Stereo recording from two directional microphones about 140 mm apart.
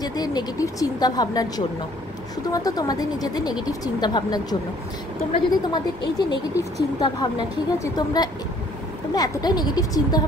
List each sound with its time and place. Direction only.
0.0 s speech: 30° left (ahead or behind)
2.5 s speech: 25° left (ahead or behind)